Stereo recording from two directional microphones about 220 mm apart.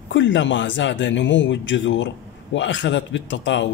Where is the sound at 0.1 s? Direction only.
55° left (ahead or behind).